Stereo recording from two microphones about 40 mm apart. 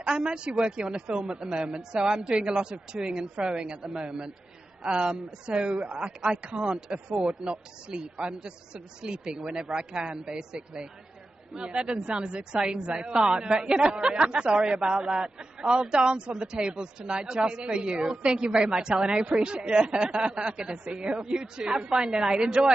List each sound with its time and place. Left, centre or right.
0.1 s speech: right
9.8 s speech: right
13.1 s speech: centre
13.4 s speech: right
18.9 s speech: centre
19.4 s speech: right